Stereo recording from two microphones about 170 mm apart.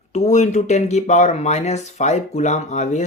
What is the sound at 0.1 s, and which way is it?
Speech, 45° left (ahead or behind).